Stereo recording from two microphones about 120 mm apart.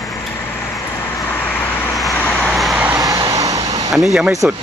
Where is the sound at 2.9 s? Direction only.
30° right (ahead or behind).